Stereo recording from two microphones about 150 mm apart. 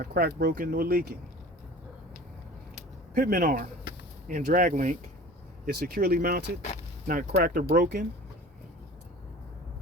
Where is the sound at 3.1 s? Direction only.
70° right (ahead or behind).